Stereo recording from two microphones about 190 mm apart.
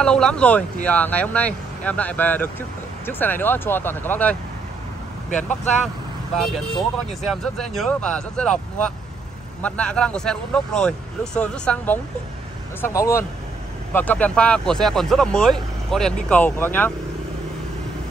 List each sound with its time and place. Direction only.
0.0 s speech: 5° left (ahead or behind)
6.3 s speech: centre (ahead or behind)